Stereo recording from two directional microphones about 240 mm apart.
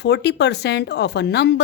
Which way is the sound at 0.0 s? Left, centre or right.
Left.